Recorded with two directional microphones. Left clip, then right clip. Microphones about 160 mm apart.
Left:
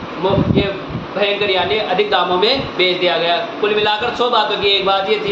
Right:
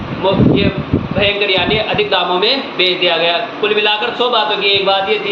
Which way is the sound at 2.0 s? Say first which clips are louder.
Left 1 dB; 15° left (ahead or behind).